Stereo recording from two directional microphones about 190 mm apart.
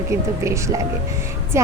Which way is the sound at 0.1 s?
15° right (ahead or behind).